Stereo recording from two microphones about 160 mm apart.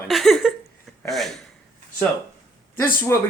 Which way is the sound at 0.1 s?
Centre (ahead or behind).